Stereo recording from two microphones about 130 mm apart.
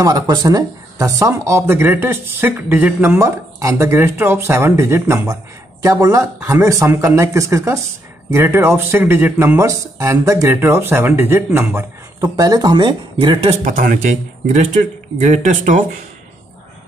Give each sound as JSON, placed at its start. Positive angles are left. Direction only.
{"t": 0.0, "sound": "speech", "side_deg": -35}
{"t": 12.2, "sound": "speech", "side_deg": -30}
{"t": 13.7, "sound": "speech", "side_deg": -85}
{"t": 14.5, "sound": "speech", "side_deg": -70}